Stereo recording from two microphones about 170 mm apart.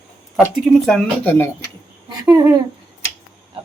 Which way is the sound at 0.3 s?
5° right (ahead or behind).